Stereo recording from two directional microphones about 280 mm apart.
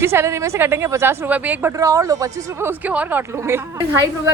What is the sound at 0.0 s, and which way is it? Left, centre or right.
A woman's voice, centre.